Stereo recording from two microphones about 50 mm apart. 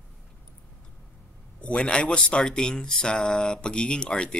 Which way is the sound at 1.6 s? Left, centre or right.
Left.